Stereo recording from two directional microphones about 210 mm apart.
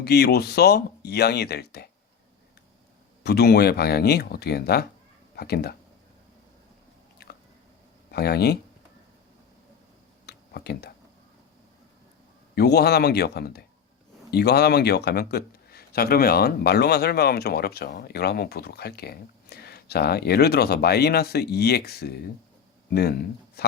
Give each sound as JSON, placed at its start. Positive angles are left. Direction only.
{"t": 0.0, "sound": "speech", "side_deg": 50}
{"t": 3.2, "sound": "speech", "side_deg": 50}
{"t": 8.1, "sound": "speech", "side_deg": 50}
{"t": 10.2, "sound": "a sound", "side_deg": 50}
{"t": 12.5, "sound": "speech", "side_deg": 50}